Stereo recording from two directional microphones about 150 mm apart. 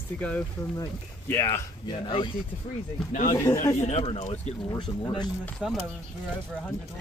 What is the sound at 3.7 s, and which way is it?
Speech, 45° left (ahead or behind).